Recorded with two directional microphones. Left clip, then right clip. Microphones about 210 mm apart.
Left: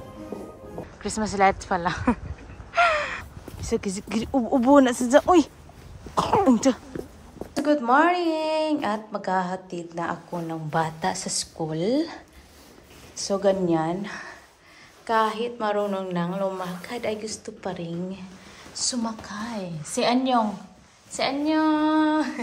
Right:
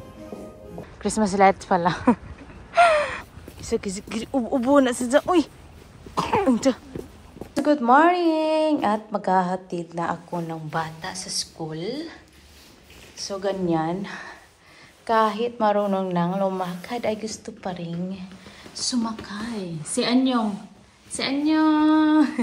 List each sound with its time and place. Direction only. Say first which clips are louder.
1.0 s speech: right 3 dB; 10° left (ahead or behind)
2.7 s gasp: right 4 dB; 5° left (ahead or behind)
3.6 s speech: right 1 dB; 20° left (ahead or behind)
6.1 s cough: left 1 dB; 10° left (ahead or behind)
7.5 s speech: right 3 dB; 5° left (ahead or behind); by 12.2 s 20° left (ahead or behind)
13.3 s speech: left 3 dB; 15° left (ahead or behind)